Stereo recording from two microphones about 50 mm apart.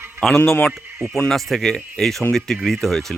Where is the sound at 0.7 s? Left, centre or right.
Centre.